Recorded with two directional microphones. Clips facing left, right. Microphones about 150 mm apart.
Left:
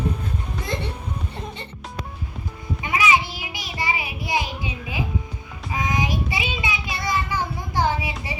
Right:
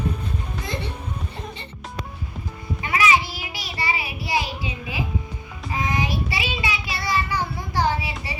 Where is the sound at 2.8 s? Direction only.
15° left (ahead or behind).